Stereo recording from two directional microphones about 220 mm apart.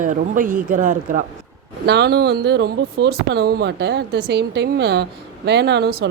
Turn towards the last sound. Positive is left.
turn(degrees=-45)  # may be behind; listen again after turning